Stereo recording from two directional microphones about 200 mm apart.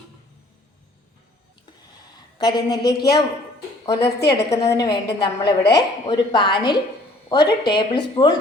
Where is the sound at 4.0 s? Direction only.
55° left (ahead or behind).